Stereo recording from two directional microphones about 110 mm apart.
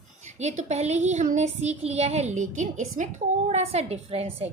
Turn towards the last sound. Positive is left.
turn(degrees=-65)  # may be behind; listen again after turning